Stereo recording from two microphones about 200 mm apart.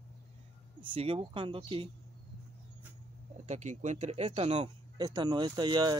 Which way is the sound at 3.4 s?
35° right (ahead or behind).